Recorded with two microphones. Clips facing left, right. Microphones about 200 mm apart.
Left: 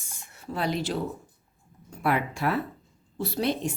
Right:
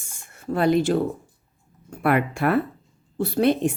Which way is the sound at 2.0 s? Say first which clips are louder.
Right 5 dB; 60° right (ahead or behind).